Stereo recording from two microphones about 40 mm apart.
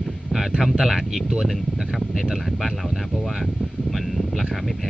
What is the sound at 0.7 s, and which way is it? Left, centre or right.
Speech, centre.